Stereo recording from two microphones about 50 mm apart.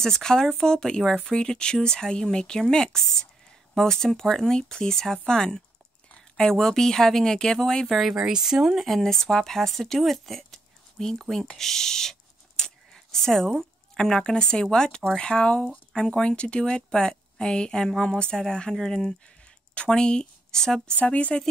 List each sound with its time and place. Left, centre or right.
0.0 s a woman's voice: centre
8.1 s speech: centre
8.8 s speech: centre
11.5 s a sound: centre
13.9 s a woman's voice: centre
20.9 s speech: left